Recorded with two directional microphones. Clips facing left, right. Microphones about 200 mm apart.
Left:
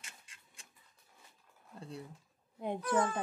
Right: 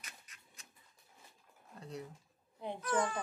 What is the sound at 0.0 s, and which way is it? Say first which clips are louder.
Printer: right 1 dB; 30° left (ahead or behind).